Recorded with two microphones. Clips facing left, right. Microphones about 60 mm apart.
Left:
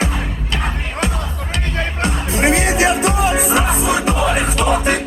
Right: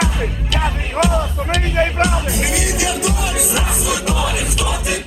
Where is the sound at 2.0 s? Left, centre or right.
Left.